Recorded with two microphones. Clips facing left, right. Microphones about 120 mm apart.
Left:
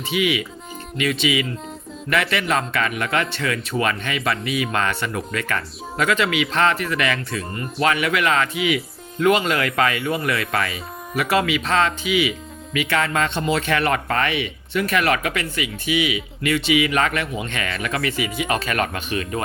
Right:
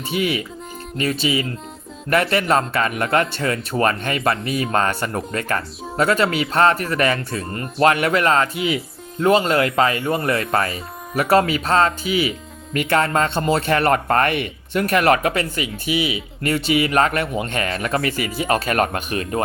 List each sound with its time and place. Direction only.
0.1 s speech: 40° right (ahead or behind)